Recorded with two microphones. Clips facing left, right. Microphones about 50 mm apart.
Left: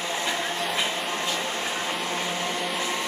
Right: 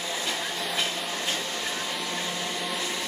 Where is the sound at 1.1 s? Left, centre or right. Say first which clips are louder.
Left 3 dB; left.